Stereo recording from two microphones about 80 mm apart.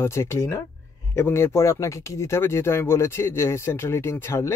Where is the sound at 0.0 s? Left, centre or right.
Left.